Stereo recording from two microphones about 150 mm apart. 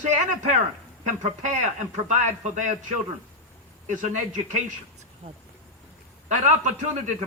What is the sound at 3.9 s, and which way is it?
Speech, 55° right (ahead or behind).